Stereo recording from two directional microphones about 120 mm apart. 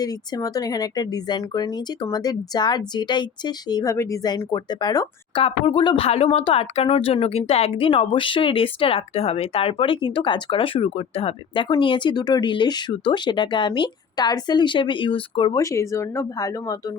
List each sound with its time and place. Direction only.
0.0 s speech: 30° left (ahead or behind)
5.4 s speech: 50° left (ahead or behind)
6.1 s speech: 55° left (ahead or behind)
15.5 s speech: 25° left (ahead or behind)